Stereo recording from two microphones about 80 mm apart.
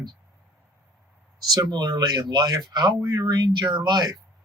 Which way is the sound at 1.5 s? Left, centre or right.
Right.